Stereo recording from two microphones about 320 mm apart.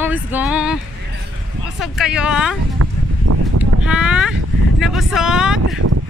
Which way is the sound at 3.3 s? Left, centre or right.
Right.